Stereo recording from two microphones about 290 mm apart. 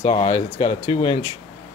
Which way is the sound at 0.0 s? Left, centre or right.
Centre.